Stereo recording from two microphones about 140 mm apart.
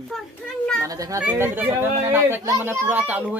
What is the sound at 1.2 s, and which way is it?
Speech, 10° right (ahead or behind).